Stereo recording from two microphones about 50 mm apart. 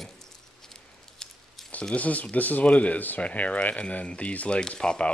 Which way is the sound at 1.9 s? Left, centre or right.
Left.